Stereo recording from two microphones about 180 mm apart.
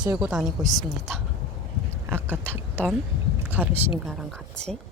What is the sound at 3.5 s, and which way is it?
Speech, 10° right (ahead or behind).